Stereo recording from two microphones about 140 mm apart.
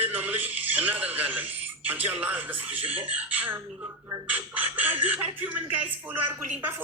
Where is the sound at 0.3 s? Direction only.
10° right (ahead or behind).